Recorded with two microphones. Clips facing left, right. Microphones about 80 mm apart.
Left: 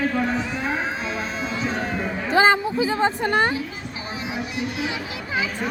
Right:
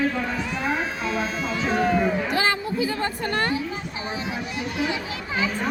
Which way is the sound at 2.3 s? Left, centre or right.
Left.